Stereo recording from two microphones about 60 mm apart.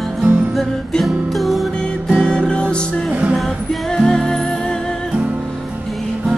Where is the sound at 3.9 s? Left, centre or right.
Centre.